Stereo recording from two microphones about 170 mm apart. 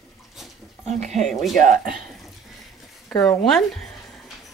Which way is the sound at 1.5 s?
50° right (ahead or behind).